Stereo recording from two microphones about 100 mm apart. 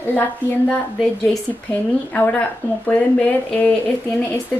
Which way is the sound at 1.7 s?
15° left (ahead or behind).